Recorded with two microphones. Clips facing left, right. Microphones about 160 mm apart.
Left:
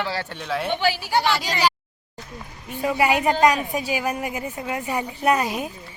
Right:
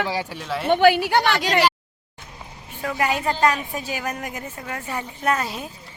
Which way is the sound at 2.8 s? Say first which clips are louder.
Left 3 dB; 10° left (ahead or behind).